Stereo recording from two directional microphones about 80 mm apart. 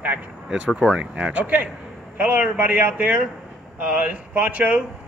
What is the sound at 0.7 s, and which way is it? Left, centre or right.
Speech, centre.